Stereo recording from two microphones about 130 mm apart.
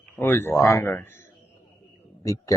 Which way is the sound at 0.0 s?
15° left (ahead or behind).